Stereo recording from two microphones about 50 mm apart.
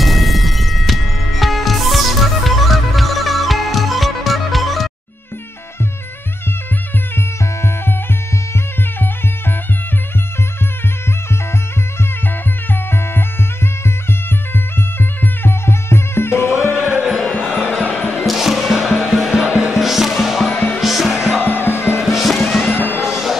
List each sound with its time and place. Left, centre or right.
0.0 s music: centre
15.0 s music: left
16.7 s music: centre
17.8 s music: left
18.1 s music: centre
20.5 s music: left
20.8 s music: centre
21.1 s music: centre
21.5 s music: left
22.0 s music: centre
22.7 s music: left
23.0 s music: centre